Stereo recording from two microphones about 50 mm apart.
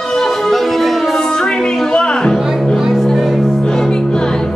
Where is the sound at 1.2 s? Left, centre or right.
Centre.